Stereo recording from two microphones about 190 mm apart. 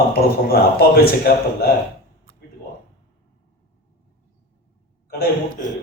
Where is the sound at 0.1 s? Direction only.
55° left (ahead or behind).